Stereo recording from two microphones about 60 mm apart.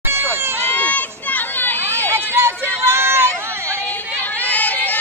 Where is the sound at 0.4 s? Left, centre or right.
Right.